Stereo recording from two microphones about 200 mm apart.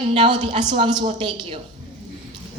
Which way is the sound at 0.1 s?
25° right (ahead or behind).